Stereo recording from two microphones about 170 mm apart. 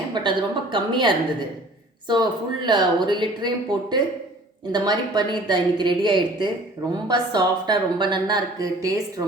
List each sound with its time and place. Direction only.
0.1 s a woman's voice: 30° right (ahead or behind)